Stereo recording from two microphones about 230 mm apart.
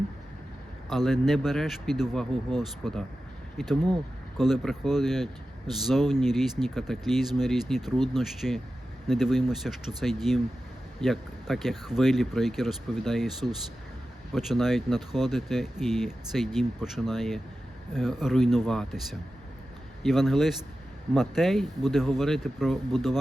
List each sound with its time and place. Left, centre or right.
0.9 s speech: centre
4.4 s speech: centre